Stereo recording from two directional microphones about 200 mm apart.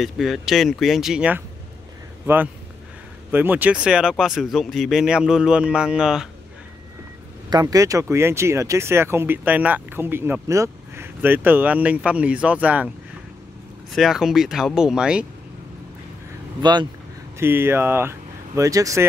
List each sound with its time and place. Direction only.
0.0 s speech: centre (ahead or behind)
7.4 s speech: 20° right (ahead or behind)
13.9 s speech: centre (ahead or behind)
16.6 s speech: 20° right (ahead or behind)
17.4 s speech: 10° right (ahead or behind)